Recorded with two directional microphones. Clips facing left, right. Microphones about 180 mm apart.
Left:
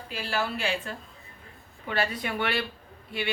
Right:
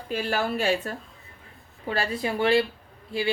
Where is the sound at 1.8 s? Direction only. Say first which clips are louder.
Right 2 dB; 30° right (ahead or behind).